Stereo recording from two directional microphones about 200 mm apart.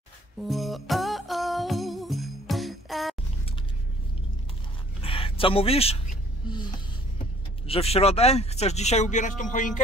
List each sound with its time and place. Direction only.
0.4 s music: centre (ahead or behind)
5.0 s a sound: 25° left (ahead or behind)
7.6 s speech: 30° left (ahead or behind)